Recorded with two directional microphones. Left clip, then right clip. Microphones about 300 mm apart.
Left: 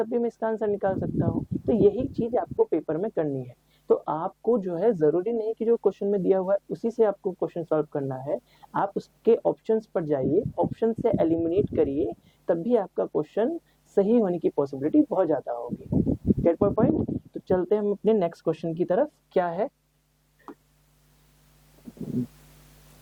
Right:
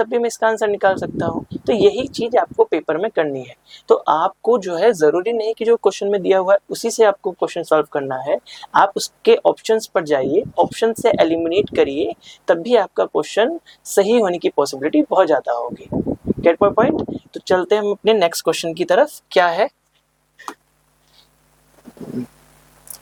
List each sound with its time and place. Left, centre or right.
0.0 s speech: centre
7.2 s speech: right
7.4 s speech: centre
15.9 s a sound: right
16.4 s speech: centre